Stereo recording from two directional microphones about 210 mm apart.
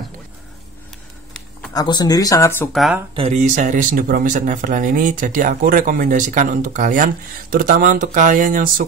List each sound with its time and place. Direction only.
1.7 s speech: 20° left (ahead or behind)
2.7 s speech: centre (ahead or behind)
3.2 s speech: 35° right (ahead or behind)